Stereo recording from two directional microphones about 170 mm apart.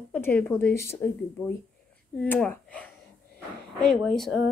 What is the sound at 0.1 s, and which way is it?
A woman's voice, 10° left (ahead or behind).